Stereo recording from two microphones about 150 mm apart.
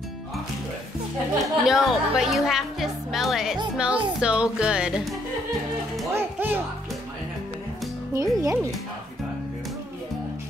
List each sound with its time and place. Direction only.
1.4 s speech: centre (ahead or behind)
6.1 s music: 15° right (ahead or behind)
8.1 s speech: 20° right (ahead or behind)